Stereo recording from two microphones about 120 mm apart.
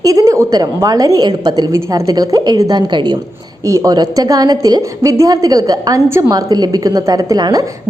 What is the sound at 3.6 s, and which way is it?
A woman's voice, 25° right (ahead or behind).